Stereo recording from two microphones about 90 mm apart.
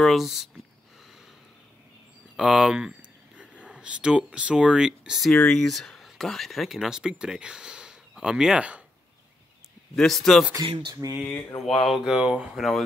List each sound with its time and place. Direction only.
0.0 s speech: centre (ahead or behind)
2.3 s speech: 5° right (ahead or behind)
5.3 s speech: 10° left (ahead or behind); by 8.8 s 15° right (ahead or behind)
9.9 s speech: 5° left (ahead or behind)
11.0 s speech: 35° right (ahead or behind)
11.6 s speech: centre (ahead or behind)